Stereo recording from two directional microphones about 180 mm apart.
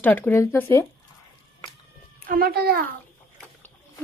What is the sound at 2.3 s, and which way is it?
Speech, 55° right (ahead or behind).